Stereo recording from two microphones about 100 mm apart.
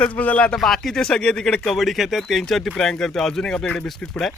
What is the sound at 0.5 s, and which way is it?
A man's voice, centre (ahead or behind).